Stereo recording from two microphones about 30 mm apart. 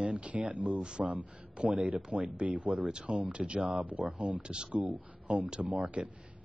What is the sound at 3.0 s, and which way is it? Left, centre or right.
Speech, right.